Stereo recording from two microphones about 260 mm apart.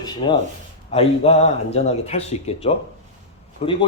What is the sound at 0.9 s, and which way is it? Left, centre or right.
Speech, left.